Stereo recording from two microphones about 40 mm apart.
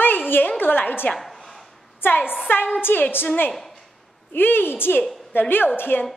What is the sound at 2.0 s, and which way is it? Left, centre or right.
Speech, left.